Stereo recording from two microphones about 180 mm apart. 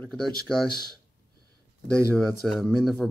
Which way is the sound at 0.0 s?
Centre (ahead or behind).